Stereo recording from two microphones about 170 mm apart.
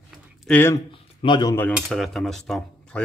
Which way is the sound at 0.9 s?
30° left (ahead or behind).